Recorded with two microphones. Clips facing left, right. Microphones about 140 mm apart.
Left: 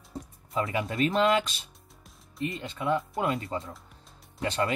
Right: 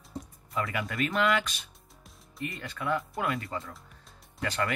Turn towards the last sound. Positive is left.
turn(degrees=25)  # may be behind; listen again after turning